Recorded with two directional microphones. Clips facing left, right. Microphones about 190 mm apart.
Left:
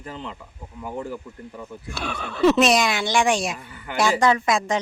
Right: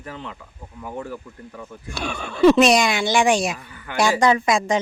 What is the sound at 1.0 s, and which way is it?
Speech, 15° left (ahead or behind).